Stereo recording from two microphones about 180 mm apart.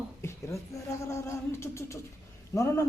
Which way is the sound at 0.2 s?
15° left (ahead or behind).